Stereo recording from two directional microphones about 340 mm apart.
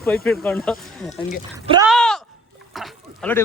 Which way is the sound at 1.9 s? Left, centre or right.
Centre.